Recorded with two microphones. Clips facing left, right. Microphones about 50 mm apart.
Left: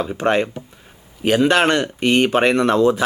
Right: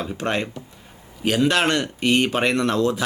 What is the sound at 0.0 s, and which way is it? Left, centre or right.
Speech, centre.